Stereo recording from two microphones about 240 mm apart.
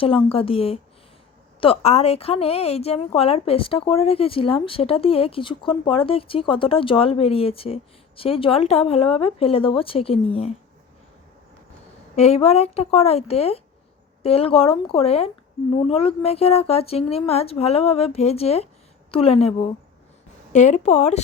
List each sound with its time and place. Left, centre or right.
0.0 s a woman's voice: left
12.1 s a woman's voice: left